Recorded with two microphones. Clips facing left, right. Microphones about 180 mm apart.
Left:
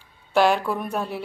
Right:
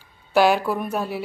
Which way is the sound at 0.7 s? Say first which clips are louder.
Right 2 dB; 5° right (ahead or behind).